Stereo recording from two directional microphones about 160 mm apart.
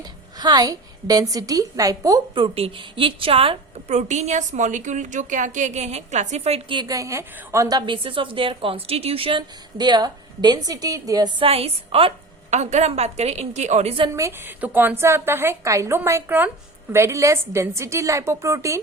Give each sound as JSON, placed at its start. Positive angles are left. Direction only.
{"t": 0.0, "sound": "a woman's voice", "side_deg": -25}
{"t": 2.3, "sound": "a woman's voice", "side_deg": -35}
{"t": 11.4, "sound": "a woman's voice", "side_deg": -40}
{"t": 14.2, "sound": "a woman's voice", "side_deg": -15}